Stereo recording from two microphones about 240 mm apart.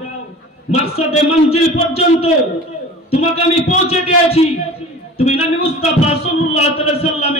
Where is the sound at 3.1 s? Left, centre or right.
Left.